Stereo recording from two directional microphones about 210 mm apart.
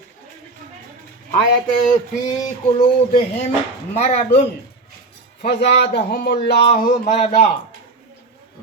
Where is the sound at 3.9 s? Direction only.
30° left (ahead or behind).